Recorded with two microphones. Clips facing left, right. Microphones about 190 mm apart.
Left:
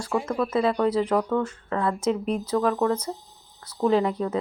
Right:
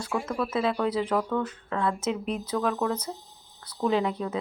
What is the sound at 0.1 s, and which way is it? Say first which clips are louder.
Speech: left 4 dB; 15° left (ahead or behind).